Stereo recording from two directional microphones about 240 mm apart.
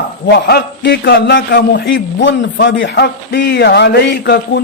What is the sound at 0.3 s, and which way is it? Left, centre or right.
A man's voice, left.